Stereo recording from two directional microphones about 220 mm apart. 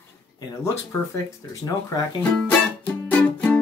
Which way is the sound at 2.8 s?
5° left (ahead or behind).